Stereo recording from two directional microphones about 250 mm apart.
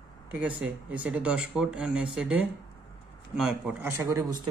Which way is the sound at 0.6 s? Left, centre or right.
Centre.